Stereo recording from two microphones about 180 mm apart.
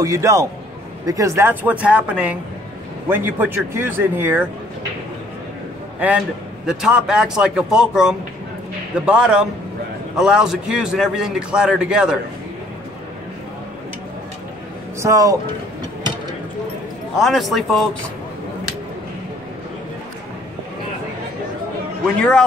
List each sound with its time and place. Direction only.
0.0 s speech: 15° right (ahead or behind)
5.9 s a man's voice: 5° right (ahead or behind)
15.0 s speech: 15° right (ahead or behind)
17.2 s a man's voice: centre (ahead or behind)
22.0 s a man's voice: 5° left (ahead or behind)